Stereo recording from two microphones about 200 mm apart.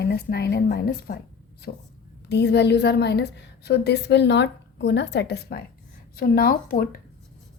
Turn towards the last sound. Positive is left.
turn(degrees=45)  # may be behind; listen again after turning